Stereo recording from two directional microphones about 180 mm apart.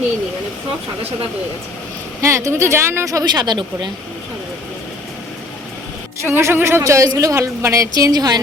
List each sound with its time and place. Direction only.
2.2 s a woman's voice: 15° right (ahead or behind)
6.2 s a woman's voice: 10° right (ahead or behind)